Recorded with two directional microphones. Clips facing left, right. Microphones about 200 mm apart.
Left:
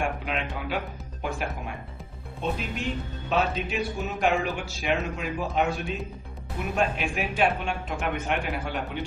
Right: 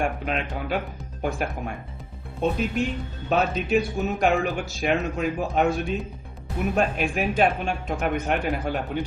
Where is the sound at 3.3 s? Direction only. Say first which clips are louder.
Right 3 dB; 45° right (ahead or behind).